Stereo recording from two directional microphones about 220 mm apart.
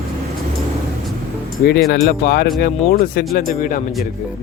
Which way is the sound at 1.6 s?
45° left (ahead or behind).